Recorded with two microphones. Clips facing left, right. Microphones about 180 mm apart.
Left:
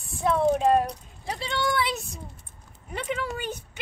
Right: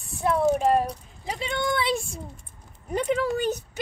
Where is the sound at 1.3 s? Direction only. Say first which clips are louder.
Even; 20° right (ahead or behind).